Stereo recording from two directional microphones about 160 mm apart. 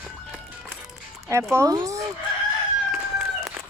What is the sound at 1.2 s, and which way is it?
Speech, 20° right (ahead or behind).